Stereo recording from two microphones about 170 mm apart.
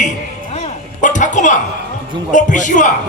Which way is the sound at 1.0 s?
45° left (ahead or behind).